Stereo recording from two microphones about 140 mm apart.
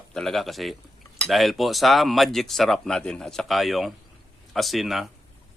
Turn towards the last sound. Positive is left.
turn(degrees=0)  # may be behind; listen again after turning